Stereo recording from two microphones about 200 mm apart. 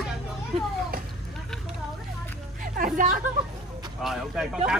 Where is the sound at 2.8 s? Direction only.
45° right (ahead or behind).